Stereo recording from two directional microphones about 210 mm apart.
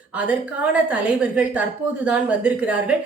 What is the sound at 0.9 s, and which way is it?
A woman's voice, 5° right (ahead or behind).